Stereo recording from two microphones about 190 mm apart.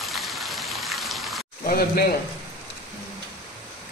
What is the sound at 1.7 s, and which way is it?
Speech, 55° left (ahead or behind).